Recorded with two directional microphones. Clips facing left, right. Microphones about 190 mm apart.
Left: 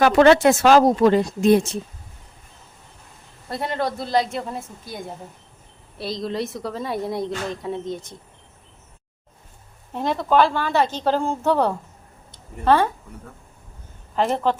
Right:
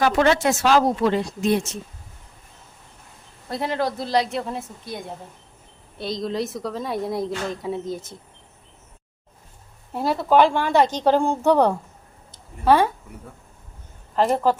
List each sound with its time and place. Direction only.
0.0 s speech: 70° left (ahead or behind); by 1.6 s 45° left (ahead or behind)
3.5 s a woman's voice: centre (ahead or behind)
9.9 s a woman's voice: 5° right (ahead or behind)
14.2 s a woman's voice: centre (ahead or behind)